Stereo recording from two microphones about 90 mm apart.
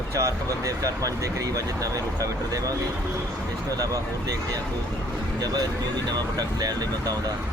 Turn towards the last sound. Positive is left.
turn(degrees=-45)  # may be behind; listen again after turning